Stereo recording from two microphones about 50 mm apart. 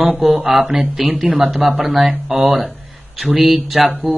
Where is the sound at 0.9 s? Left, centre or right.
Centre.